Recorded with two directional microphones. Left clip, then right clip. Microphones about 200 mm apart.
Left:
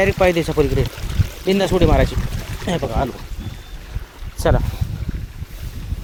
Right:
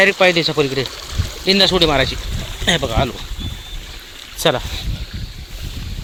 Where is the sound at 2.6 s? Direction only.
5° right (ahead or behind).